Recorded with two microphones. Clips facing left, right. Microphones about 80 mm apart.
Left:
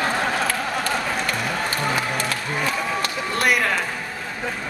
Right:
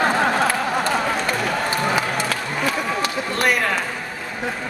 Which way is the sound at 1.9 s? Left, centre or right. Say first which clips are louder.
Right 2 dB; centre.